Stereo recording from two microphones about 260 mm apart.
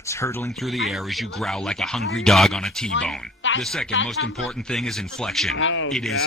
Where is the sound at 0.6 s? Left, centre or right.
Centre.